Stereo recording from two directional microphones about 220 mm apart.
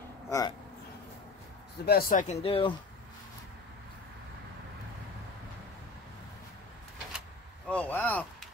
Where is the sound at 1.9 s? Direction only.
40° left (ahead or behind).